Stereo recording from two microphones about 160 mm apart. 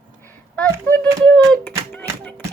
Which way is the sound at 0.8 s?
10° left (ahead or behind).